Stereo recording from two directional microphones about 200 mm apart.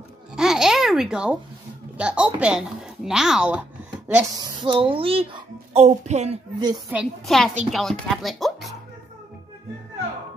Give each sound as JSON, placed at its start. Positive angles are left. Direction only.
{"t": 0.4, "sound": "babbling", "side_deg": 0}
{"t": 2.0, "sound": "speech", "side_deg": -5}
{"t": 4.4, "sound": "speech", "side_deg": -20}
{"t": 6.9, "sound": "speech", "side_deg": -5}